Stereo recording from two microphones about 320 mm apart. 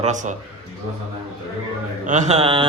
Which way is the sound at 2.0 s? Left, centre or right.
Right.